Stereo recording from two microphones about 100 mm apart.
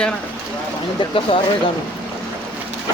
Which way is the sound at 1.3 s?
60° left (ahead or behind).